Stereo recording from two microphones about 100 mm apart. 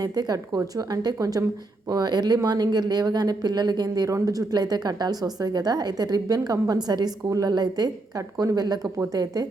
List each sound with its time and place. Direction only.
0.0 s speech: 40° right (ahead or behind)